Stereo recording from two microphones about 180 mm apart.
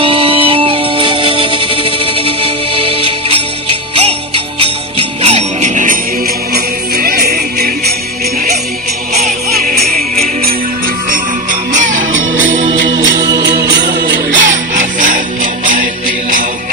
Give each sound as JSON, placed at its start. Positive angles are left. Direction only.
{"t": 0.0, "sound": "music", "side_deg": -30}
{"t": 4.6, "sound": "jingle bell", "side_deg": -35}
{"t": 10.4, "sound": "music", "side_deg": -50}
{"t": 13.1, "sound": "music", "side_deg": -20}
{"t": 13.4, "sound": "music", "side_deg": -65}